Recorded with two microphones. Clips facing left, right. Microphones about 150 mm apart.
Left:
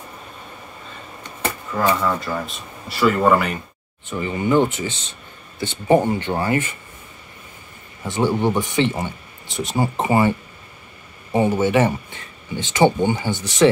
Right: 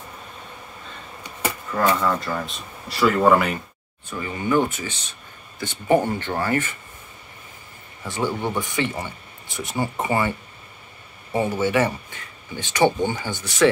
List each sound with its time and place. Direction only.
1.9 s speech: 5° left (ahead or behind)
4.0 s speech: 20° left (ahead or behind)
8.0 s speech: 25° left (ahead or behind)
11.3 s speech: 25° left (ahead or behind)